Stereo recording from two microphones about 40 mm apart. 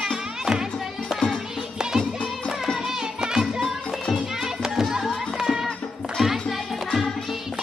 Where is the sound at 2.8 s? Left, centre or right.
Centre.